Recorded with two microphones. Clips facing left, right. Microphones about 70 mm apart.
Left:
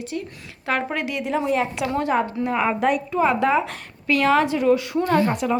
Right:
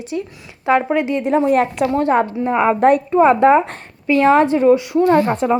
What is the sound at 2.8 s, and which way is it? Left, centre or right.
Speech, right.